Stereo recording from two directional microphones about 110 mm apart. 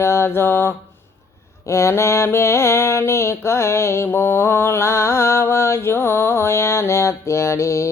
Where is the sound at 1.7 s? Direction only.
25° left (ahead or behind).